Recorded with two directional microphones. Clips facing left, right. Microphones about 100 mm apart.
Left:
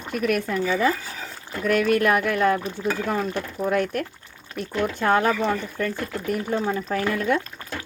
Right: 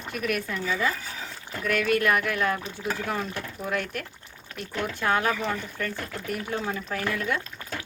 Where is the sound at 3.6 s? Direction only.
45° left (ahead or behind).